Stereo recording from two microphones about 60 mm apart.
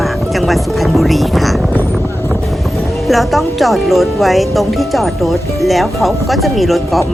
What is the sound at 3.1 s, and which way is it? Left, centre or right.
Speech, centre.